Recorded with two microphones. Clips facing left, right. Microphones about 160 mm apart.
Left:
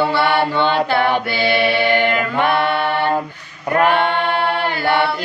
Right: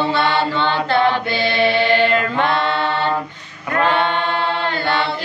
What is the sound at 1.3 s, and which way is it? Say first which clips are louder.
Mantra: even; 20° right (ahead or behind).